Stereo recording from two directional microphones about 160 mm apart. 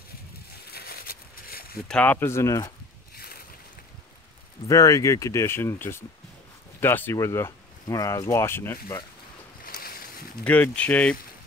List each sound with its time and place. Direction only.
0.7 s a sound: 75° left (ahead or behind)
1.9 s speech: 10° left (ahead or behind)
3.2 s boat: 70° left (ahead or behind)
4.6 s speech: 20° left (ahead or behind)
9.7 s boat: 65° left (ahead or behind)
10.4 s speech: 10° left (ahead or behind)